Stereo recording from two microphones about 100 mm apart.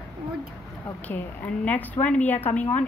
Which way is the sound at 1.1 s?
15° left (ahead or behind).